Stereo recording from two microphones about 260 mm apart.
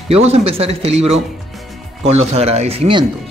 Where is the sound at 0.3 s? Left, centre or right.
Right.